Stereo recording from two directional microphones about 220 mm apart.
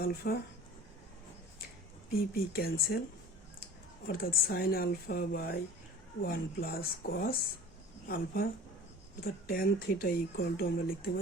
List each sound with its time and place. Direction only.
0.2 s speech: 40° left (ahead or behind)
2.3 s speech: 45° left (ahead or behind)
4.0 s speech: 40° left (ahead or behind)